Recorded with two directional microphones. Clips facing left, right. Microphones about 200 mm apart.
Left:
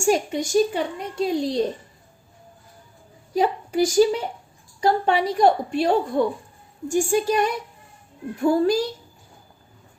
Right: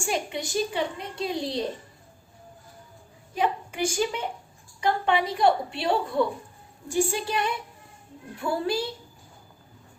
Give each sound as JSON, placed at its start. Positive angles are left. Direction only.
{"t": 0.0, "sound": "a woman's voice", "side_deg": 45}
{"t": 3.3, "sound": "a woman's voice", "side_deg": 35}